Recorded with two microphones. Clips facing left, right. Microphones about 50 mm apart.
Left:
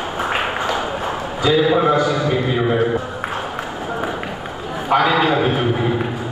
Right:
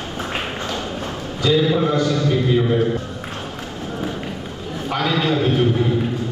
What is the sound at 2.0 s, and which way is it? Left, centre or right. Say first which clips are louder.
Speech: left 1 dB; centre.